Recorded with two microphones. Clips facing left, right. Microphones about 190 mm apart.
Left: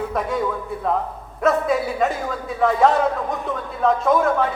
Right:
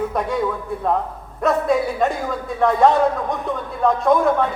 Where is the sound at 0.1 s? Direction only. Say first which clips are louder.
Right 1 dB; centre (ahead or behind).